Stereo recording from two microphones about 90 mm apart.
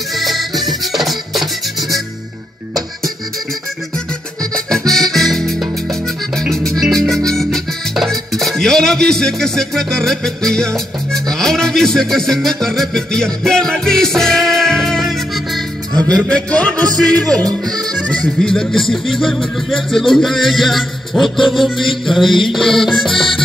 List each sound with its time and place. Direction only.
0.1 s music: centre (ahead or behind)
4.4 s music: 5° left (ahead or behind)
16.3 s music: 10° left (ahead or behind)
17.5 s speech: 45° right (ahead or behind)
18.4 s speech: 5° left (ahead or behind)